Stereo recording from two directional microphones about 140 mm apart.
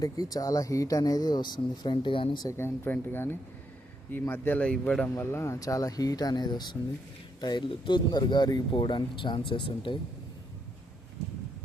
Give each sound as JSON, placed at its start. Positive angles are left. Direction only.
{"t": 0.0, "sound": "speech", "side_deg": 25}
{"t": 2.5, "sound": "speech", "side_deg": 15}
{"t": 5.2, "sound": "speech", "side_deg": 20}